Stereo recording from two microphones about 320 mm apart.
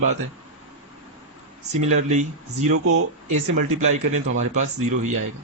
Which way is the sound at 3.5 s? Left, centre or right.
Right.